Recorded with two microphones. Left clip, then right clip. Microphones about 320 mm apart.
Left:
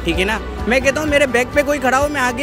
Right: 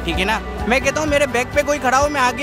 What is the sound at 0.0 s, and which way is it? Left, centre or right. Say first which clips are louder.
Speech: left 1 dB; centre.